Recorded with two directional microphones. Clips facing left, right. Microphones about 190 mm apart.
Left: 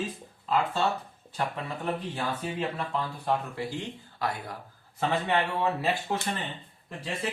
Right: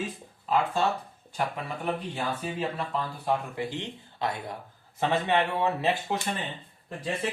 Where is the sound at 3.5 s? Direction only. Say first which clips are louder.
Right 1 dB; 20° right (ahead or behind).